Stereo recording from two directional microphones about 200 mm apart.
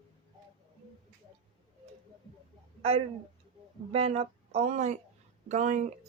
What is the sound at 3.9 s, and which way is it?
Speech, 30° right (ahead or behind).